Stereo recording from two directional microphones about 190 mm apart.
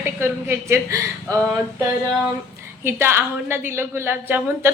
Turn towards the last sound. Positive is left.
turn(degrees=-10)  # may be behind; listen again after turning